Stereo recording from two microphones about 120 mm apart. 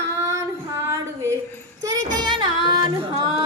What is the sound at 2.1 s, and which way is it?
Child singing, 40° right (ahead or behind).